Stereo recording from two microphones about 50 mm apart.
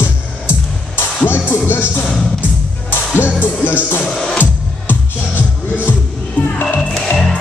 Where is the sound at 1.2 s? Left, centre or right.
Left.